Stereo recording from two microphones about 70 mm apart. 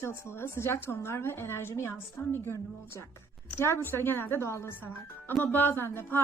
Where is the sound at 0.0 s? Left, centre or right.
Left.